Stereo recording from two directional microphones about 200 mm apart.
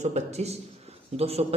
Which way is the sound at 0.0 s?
35° right (ahead or behind).